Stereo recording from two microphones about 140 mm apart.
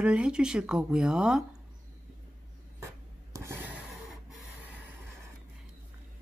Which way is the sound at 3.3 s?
20° right (ahead or behind).